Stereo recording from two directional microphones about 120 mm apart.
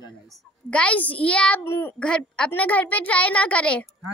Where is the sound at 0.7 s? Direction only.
10° left (ahead or behind).